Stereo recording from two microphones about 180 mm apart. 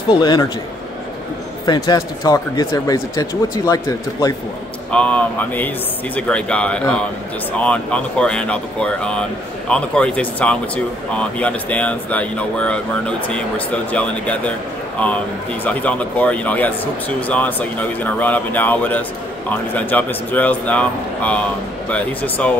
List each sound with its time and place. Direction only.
0.1 s speech: 25° left (ahead or behind)
1.7 s speech: 20° left (ahead or behind)
4.9 s speech: 5° left (ahead or behind)
15.6 s speech: 10° left (ahead or behind)